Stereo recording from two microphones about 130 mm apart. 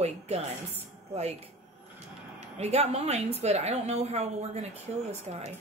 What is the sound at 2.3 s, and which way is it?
A woman's voice, 55° right (ahead or behind).